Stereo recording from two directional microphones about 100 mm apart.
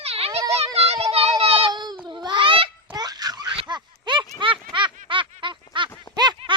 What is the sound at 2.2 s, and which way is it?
Babbling, 50° right (ahead or behind).